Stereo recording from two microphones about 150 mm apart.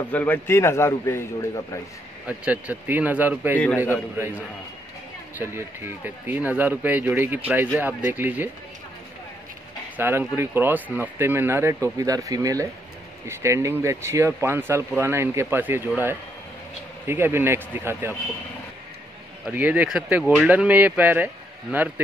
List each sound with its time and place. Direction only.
0.1 s a man's voice: 10° left (ahead or behind)
2.2 s speech: 10° right (ahead or behind)
3.5 s a man's voice: 15° left (ahead or behind)
3.9 s speech: 15° right (ahead or behind)
9.9 s speech: 15° right (ahead or behind)
19.5 s speech: 10° right (ahead or behind)